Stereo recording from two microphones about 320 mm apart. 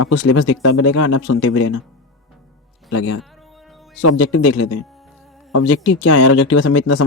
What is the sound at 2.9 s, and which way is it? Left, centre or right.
Speech, left.